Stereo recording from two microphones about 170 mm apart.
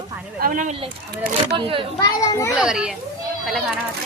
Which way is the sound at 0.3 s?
55° right (ahead or behind).